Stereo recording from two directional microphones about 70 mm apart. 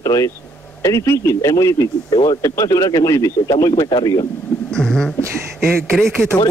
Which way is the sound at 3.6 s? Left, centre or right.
Left.